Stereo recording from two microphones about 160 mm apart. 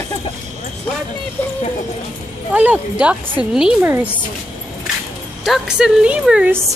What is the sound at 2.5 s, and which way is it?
Speech, 10° right (ahead or behind).